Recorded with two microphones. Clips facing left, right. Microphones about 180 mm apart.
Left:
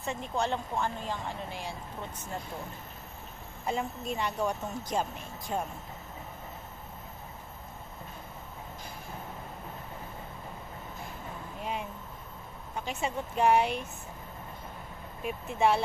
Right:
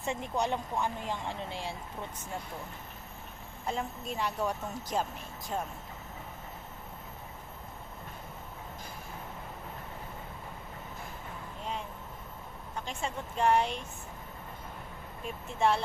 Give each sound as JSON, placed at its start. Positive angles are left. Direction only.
{"t": 0.0, "sound": "speech", "side_deg": -20}
{"t": 1.5, "sound": "speech", "side_deg": -25}
{"t": 3.6, "sound": "speech", "side_deg": 0}
{"t": 12.8, "sound": "speech", "side_deg": 10}
{"t": 15.2, "sound": "speech", "side_deg": 5}